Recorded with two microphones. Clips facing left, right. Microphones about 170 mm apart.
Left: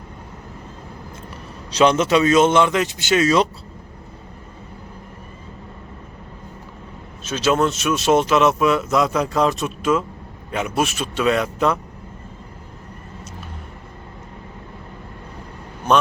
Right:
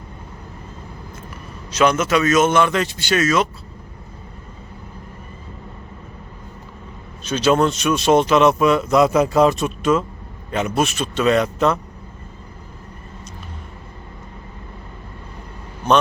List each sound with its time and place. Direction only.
1.7 s speech: 30° left (ahead or behind)
3.2 s speech: 35° left (ahead or behind)
7.3 s speech: 5° left (ahead or behind)